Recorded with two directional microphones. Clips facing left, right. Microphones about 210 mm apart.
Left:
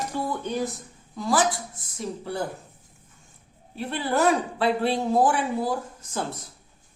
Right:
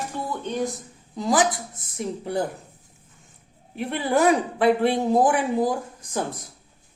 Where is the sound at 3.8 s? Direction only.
15° right (ahead or behind).